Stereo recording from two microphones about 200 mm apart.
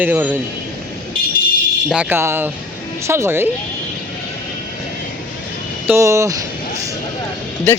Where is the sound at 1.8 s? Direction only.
5° right (ahead or behind).